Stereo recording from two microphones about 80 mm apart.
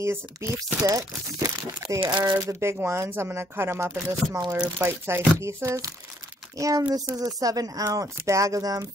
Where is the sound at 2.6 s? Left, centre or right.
Right.